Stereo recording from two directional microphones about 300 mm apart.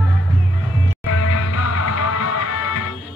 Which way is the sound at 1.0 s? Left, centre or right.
Left.